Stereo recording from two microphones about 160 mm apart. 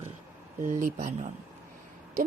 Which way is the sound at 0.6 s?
55° right (ahead or behind).